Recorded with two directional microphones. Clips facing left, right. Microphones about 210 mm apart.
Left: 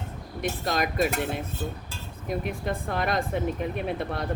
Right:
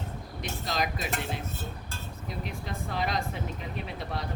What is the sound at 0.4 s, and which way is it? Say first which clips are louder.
Speech: left 5 dB; 55° left (ahead or behind).